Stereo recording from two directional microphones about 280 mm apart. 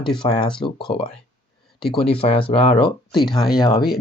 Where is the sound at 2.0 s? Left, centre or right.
Centre.